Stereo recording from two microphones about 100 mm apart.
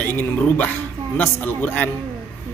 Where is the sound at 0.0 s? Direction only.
15° left (ahead or behind).